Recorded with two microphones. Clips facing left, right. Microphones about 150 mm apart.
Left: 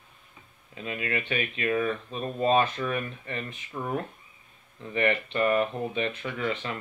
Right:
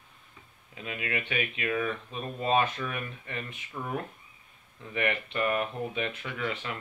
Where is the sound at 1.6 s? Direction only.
30° left (ahead or behind).